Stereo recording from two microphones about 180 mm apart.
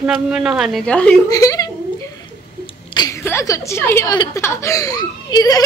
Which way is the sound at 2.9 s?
20° left (ahead or behind).